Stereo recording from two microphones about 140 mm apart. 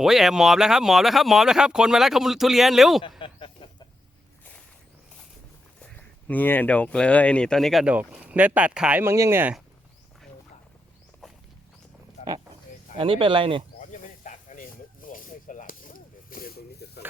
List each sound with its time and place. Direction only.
0.0 s speech: 5° right (ahead or behind)
3.2 s a sound: 40° left (ahead or behind)
6.0 s speech: 10° left (ahead or behind); by 9.6 s 15° right (ahead or behind)
11.2 s walk: centre (ahead or behind)
12.2 s a sound: 55° left (ahead or behind)
13.0 s speech: 40° right (ahead or behind)
13.7 s snake: 65° left (ahead or behind); by 16.5 s 85° left